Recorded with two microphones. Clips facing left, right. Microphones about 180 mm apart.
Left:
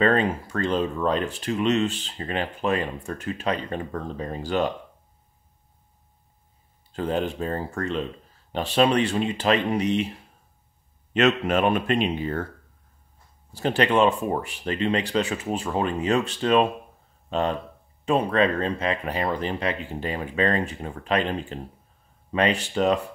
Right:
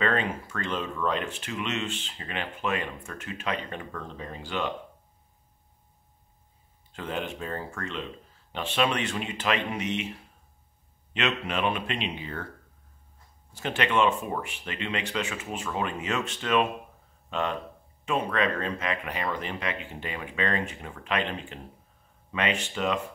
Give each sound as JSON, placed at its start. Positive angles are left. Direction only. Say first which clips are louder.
{"t": 0.0, "sound": "speech", "louder": "left 6 dB", "side_deg": 35}
{"t": 6.9, "sound": "speech", "louder": "left 7 dB", "side_deg": 35}
{"t": 11.1, "sound": "speech", "louder": "left 8 dB", "side_deg": 45}
{"t": 13.5, "sound": "speech", "louder": "left 6 dB", "side_deg": 35}